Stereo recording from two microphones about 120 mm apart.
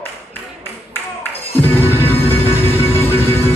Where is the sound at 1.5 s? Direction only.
15° left (ahead or behind).